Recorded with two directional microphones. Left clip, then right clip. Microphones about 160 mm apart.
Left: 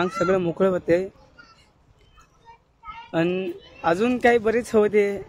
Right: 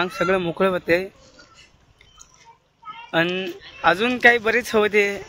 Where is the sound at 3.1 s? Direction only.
5° right (ahead or behind).